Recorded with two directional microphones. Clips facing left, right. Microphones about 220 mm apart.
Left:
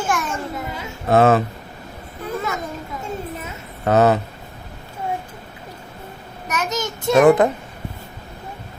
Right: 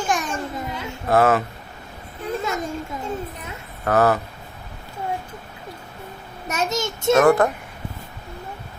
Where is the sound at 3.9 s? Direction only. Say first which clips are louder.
Left 3 dB; 20° left (ahead or behind).